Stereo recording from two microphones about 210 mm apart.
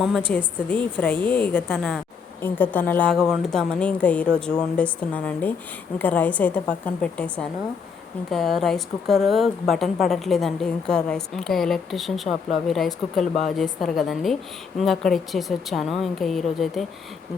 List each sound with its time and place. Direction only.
0.3 s a woman's voice: 5° left (ahead or behind)